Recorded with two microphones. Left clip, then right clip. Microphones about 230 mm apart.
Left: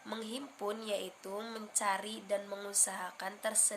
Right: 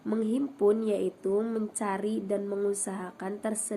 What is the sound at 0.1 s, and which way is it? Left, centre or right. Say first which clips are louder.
Speech: right 12 dB; centre.